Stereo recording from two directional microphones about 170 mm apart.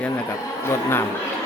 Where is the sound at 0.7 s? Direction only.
15° left (ahead or behind).